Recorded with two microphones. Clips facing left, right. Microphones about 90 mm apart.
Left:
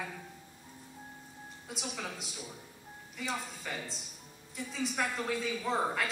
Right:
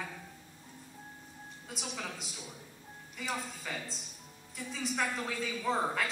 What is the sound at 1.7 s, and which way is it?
A woman's voice, centre (ahead or behind).